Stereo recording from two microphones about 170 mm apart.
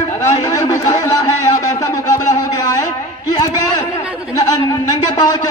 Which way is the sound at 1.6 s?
20° left (ahead or behind).